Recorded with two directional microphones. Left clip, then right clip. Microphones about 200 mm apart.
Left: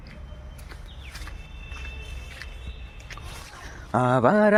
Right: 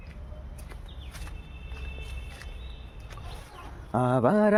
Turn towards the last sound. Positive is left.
turn(degrees=5)  # may be behind; listen again after turning